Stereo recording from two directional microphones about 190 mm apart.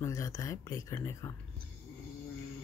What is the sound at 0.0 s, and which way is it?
Speech, 15° left (ahead or behind).